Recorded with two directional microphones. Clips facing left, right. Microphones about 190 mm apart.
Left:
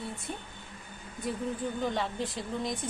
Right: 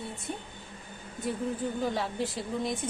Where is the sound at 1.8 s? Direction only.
5° right (ahead or behind).